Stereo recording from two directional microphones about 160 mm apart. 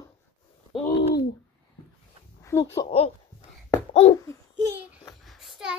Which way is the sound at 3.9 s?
35° left (ahead or behind).